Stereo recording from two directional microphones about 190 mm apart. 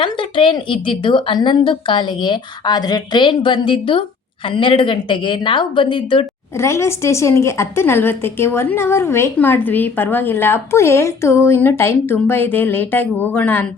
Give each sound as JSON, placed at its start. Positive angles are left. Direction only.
{"t": 0.0, "sound": "a woman's voice", "side_deg": 25}
{"t": 6.6, "sound": "a woman's voice", "side_deg": 15}